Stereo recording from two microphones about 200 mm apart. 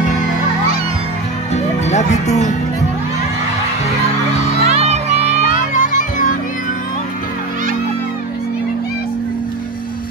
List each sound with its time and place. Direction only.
1.5 s music: 35° left (ahead or behind)
4.6 s music: 35° right (ahead or behind)
5.6 s music: 40° left (ahead or behind)